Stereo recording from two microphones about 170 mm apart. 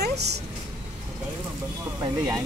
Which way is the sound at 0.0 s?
75° right (ahead or behind).